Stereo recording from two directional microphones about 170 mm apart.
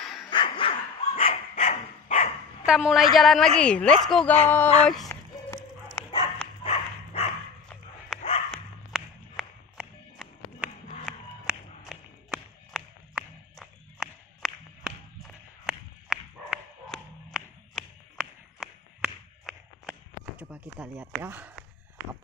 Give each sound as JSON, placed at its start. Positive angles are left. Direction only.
{"t": 0.0, "sound": "dog", "side_deg": 0}
{"t": 0.3, "sound": "dog", "side_deg": 30}
{"t": 2.6, "sound": "a woman's voice", "side_deg": -5}
{"t": 5.0, "sound": "a sound", "side_deg": 15}
{"t": 6.0, "sound": "dog", "side_deg": 10}
{"t": 6.6, "sound": "dog", "side_deg": 35}
{"t": 8.5, "sound": "a sound", "side_deg": 0}
{"t": 21.0, "sound": "speech", "side_deg": -10}